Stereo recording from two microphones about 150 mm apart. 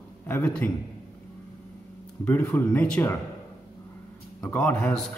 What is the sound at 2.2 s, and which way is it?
Speech, 10° left (ahead or behind).